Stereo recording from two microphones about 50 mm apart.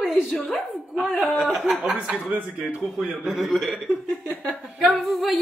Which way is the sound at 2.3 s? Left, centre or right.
Right.